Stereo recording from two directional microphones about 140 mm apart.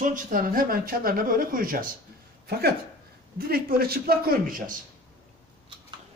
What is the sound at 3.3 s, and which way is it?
Speech, 90° right.